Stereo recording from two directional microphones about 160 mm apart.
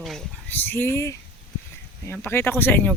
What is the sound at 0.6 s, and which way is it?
Speech, 15° left (ahead or behind).